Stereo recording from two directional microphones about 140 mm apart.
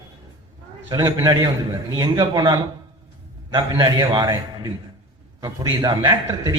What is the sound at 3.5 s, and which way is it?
Speech, 40° right (ahead or behind).